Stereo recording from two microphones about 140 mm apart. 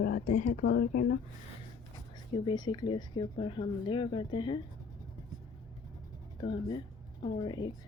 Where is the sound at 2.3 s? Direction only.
30° left (ahead or behind).